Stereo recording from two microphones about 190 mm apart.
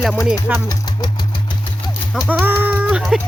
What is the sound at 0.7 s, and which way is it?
Speech, 20° left (ahead or behind).